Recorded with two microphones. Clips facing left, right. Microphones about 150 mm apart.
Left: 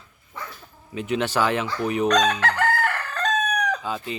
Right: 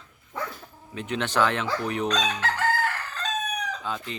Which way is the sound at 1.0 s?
10° left (ahead or behind).